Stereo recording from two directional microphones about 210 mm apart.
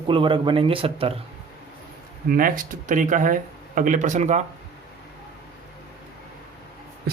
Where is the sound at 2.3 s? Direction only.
40° right (ahead or behind).